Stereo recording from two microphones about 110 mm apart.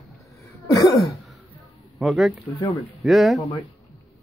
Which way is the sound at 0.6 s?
35° left (ahead or behind).